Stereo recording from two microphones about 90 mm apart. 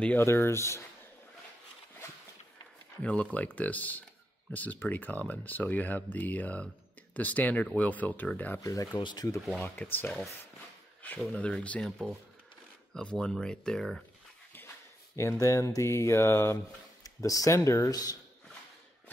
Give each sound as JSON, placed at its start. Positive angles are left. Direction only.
{"t": 0.2, "sound": "speech", "side_deg": 30}
{"t": 3.0, "sound": "speech", "side_deg": 15}
{"t": 8.5, "sound": "speech", "side_deg": 40}
{"t": 9.6, "sound": "speech", "side_deg": 20}
{"t": 11.0, "sound": "a sound", "side_deg": 20}
{"t": 11.3, "sound": "speech", "side_deg": 15}
{"t": 15.1, "sound": "speech", "side_deg": 35}